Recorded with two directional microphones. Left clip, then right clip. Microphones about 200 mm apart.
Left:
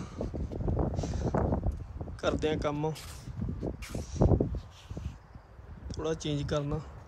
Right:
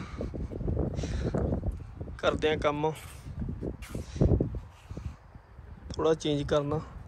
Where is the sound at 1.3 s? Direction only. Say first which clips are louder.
Left 2 dB; 5° right (ahead or behind).